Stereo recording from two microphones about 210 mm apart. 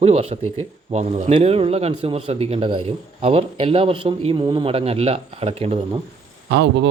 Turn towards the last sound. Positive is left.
turn(degrees=-55)  # may be behind; listen again after turning